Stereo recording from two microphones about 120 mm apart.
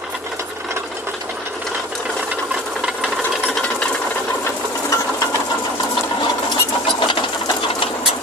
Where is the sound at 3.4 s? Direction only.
10° left (ahead or behind).